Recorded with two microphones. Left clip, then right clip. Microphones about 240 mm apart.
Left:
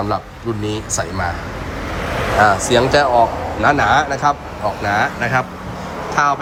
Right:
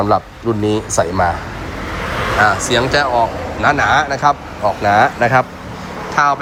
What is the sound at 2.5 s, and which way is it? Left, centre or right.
A man's voice, centre.